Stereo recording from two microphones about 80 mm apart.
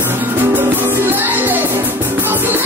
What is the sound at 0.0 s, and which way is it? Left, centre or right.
Music, right.